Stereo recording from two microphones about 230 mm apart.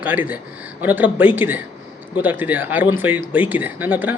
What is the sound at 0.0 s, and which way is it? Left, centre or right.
Speech, centre.